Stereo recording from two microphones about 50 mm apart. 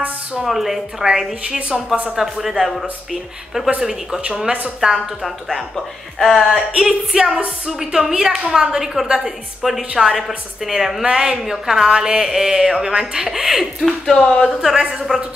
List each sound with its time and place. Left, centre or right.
0.3 s a woman's voice: centre
4.2 s speech: centre
4.7 s a woman's voice: centre
6.7 s a woman's voice: centre
14.8 s a woman's voice: centre